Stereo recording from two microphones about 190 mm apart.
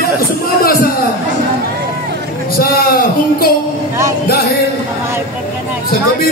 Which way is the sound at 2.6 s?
50° left (ahead or behind).